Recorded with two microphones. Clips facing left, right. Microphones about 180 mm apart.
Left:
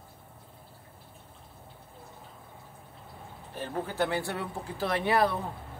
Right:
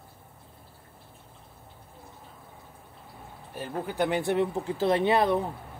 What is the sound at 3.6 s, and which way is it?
Speech, 15° right (ahead or behind).